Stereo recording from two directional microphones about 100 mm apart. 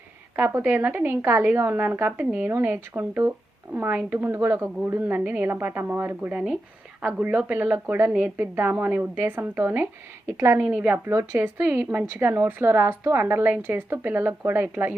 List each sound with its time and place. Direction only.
0.3 s a woman's voice: 20° right (ahead or behind)
10.3 s a woman's voice: 30° right (ahead or behind)
10.7 s a woman's voice: 20° right (ahead or behind)